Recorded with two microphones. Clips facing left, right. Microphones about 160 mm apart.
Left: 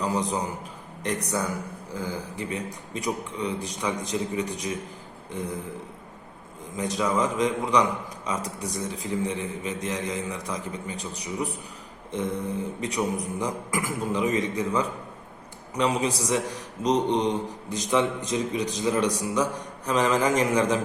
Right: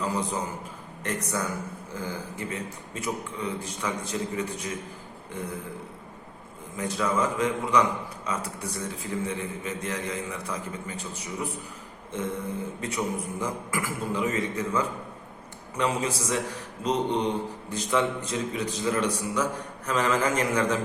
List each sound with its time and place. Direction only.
0.0 s a man's voice: 15° left (ahead or behind)
1.9 s speech: 15° left (ahead or behind)
5.4 s a man's voice: 40° left (ahead or behind)
6.7 s speech: 15° left (ahead or behind)